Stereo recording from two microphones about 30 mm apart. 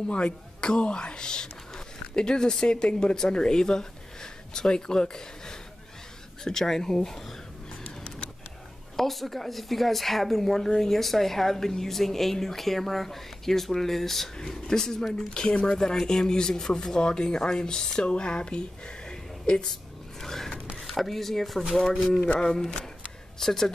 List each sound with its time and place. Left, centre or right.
0.1 s speech: left; by 7.2 s centre
8.9 s speech: centre
11.0 s speech: centre; by 18.6 s left
19.0 s a sound: left
19.7 s filing: centre
20.8 s speech: centre
22.4 s speech: left